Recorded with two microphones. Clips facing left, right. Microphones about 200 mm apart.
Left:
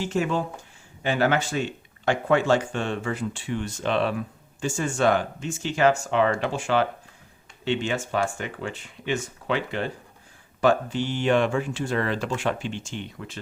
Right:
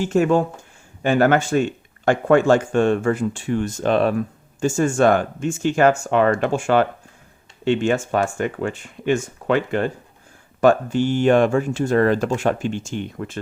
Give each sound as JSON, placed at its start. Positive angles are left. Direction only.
{"t": 0.0, "sound": "speech", "side_deg": -50}